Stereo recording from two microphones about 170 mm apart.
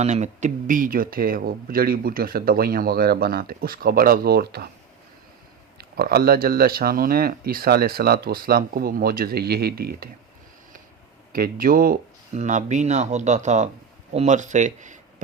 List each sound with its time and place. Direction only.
0.0 s speech: 45° right (ahead or behind); by 4.7 s 65° right (ahead or behind)
5.7 s speech: 65° right (ahead or behind)
11.3 s speech: 60° right (ahead or behind)